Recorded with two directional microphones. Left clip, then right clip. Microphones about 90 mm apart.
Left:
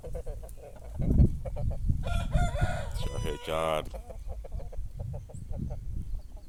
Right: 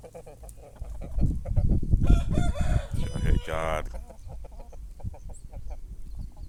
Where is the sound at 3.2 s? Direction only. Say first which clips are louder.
Even; 45° left (ahead or behind).